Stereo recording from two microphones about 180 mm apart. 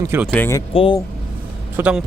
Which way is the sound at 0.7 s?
30° left (ahead or behind).